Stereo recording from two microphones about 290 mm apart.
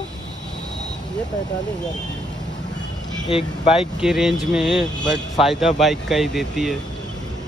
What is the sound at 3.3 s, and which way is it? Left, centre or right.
Speech, centre.